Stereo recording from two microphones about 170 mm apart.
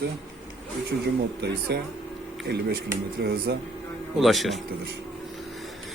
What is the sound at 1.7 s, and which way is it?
Speech, 75° right (ahead or behind).